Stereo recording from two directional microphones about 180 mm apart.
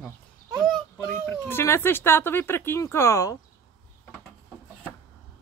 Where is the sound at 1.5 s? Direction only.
15° left (ahead or behind).